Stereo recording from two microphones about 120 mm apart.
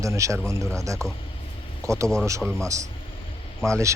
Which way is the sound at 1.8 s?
25° right (ahead or behind).